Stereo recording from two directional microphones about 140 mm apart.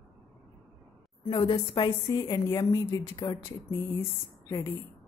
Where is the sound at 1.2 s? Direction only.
35° left (ahead or behind).